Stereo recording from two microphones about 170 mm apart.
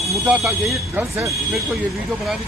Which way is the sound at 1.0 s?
10° right (ahead or behind).